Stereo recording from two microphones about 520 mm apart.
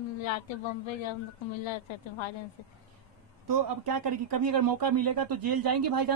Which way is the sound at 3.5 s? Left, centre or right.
Right.